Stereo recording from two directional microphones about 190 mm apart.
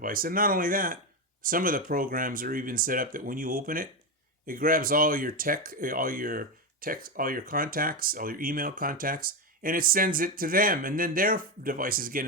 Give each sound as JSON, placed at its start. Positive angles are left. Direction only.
{"t": 0.0, "sound": "speech", "side_deg": -50}